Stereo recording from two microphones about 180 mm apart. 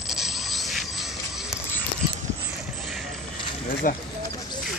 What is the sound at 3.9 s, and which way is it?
Speech, 50° left (ahead or behind).